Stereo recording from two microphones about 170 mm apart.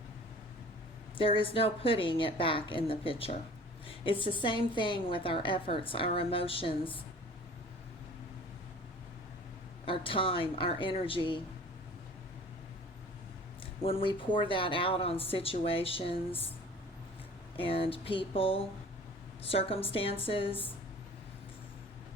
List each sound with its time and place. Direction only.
1.2 s a woman's voice: 30° left (ahead or behind)
9.8 s a woman's voice: 30° left (ahead or behind)
13.8 s a woman's voice: 30° left (ahead or behind)
17.6 s a woman's voice: 30° left (ahead or behind)